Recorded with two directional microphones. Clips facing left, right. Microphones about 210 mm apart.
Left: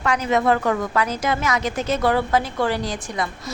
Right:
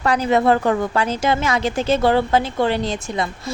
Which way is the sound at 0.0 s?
35° right (ahead or behind).